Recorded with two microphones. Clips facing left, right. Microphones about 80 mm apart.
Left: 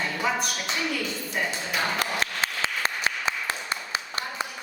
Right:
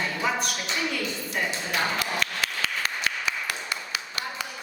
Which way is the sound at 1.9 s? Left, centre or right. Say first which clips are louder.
Left 1 dB; left.